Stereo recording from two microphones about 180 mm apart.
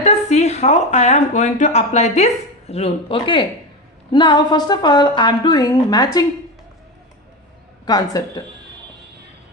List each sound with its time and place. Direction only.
0.0 s speech: 40° left (ahead or behind); by 6.2 s 20° left (ahead or behind)
7.9 s speech: 20° left (ahead or behind)